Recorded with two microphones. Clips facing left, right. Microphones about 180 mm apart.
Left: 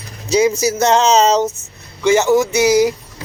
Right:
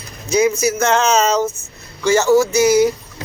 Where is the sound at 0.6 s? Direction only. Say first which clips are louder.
Left 2 dB; 35° left (ahead or behind).